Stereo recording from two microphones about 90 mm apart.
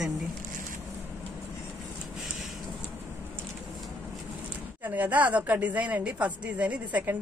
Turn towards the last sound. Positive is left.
turn(degrees=-20)  # may be behind; listen again after turning